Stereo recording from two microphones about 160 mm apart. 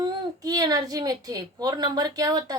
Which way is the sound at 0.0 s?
25° right (ahead or behind).